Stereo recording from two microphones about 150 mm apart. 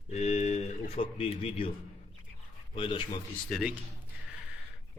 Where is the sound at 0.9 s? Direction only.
40° left (ahead or behind).